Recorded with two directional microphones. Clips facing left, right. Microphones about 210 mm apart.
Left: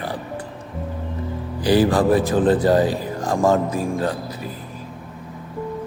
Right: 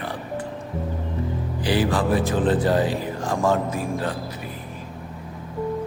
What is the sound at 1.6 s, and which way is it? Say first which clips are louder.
Speech: left 6 dB; 40° left (ahead or behind).